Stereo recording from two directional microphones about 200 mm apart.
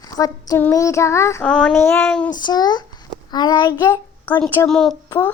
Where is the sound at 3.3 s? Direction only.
20° left (ahead or behind); by 4.9 s centre (ahead or behind).